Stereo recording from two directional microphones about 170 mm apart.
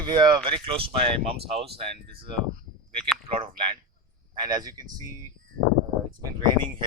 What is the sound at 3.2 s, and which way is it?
Speech, 30° right (ahead or behind).